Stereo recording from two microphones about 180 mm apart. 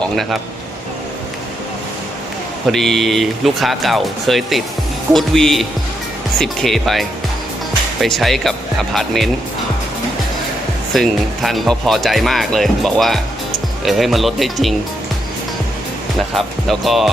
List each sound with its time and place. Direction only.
2.6 s speech: centre (ahead or behind)
10.9 s speech: centre (ahead or behind)
16.3 s speech: centre (ahead or behind)